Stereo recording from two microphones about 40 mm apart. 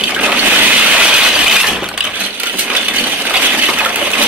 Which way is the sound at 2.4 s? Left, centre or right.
Right.